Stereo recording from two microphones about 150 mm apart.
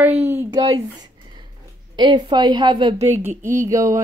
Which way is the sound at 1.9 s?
30° right (ahead or behind).